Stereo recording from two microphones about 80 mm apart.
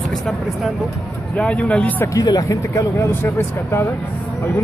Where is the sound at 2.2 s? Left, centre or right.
Left.